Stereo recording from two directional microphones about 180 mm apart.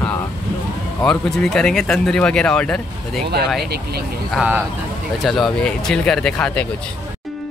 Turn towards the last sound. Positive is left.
turn(degrees=5)  # may be behind; listen again after turning